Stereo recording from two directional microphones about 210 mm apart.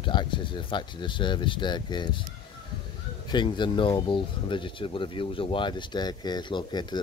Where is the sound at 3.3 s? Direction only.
20° left (ahead or behind).